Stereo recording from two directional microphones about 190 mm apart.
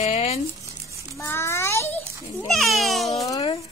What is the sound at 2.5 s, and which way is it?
Speech, centre (ahead or behind).